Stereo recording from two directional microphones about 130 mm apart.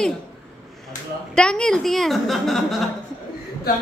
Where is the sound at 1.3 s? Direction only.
5° left (ahead or behind).